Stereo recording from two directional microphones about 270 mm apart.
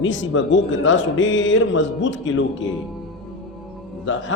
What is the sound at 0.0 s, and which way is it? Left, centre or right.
A man's voice, left.